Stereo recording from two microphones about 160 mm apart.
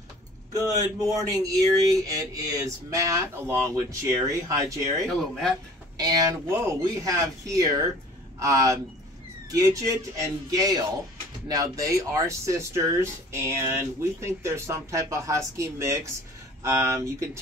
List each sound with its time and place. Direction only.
0.5 s speech: 20° right (ahead or behind)
5.0 s speech: centre (ahead or behind)
5.9 s speech: 25° right (ahead or behind)